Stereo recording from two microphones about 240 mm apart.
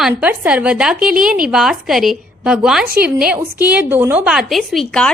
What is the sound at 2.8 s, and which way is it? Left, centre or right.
Speech, right.